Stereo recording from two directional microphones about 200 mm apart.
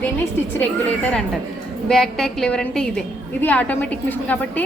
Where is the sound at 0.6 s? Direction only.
10° left (ahead or behind).